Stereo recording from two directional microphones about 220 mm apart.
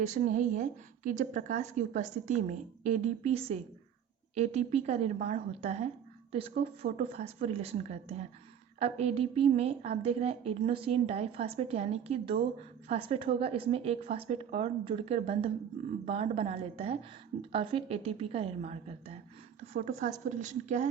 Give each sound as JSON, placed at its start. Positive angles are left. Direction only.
{"t": 0.0, "sound": "a woman's voice", "side_deg": -35}
{"t": 6.9, "sound": "a woman's voice", "side_deg": -25}